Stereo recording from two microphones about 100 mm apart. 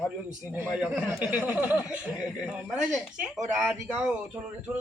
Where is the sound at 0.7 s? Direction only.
10° right (ahead or behind).